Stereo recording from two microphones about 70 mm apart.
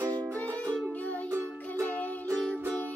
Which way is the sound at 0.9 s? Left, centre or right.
Left.